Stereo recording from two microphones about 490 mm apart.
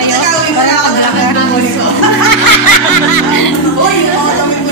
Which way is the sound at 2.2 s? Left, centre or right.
Left.